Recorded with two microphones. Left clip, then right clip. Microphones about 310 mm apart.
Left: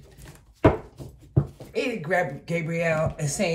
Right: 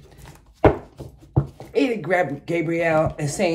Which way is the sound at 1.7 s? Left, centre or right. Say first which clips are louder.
Right 5 dB; right.